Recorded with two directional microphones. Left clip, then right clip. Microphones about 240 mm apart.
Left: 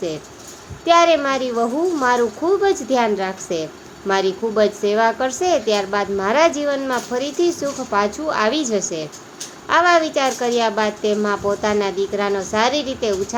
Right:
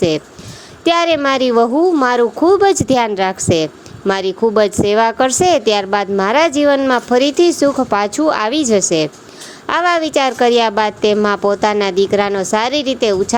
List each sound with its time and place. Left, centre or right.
0.9 s a woman's voice: right